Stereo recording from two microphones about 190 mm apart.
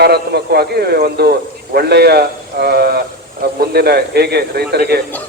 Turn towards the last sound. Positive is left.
turn(degrees=-60)  # may be behind; listen again after turning